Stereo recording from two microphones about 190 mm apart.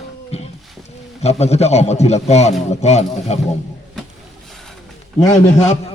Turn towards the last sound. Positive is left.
turn(degrees=35)  # may be behind; listen again after turning